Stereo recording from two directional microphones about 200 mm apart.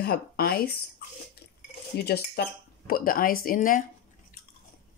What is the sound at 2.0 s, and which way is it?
Speech, 55° left (ahead or behind).